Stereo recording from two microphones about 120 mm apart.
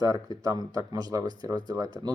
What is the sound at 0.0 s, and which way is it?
Speech, 30° right (ahead or behind).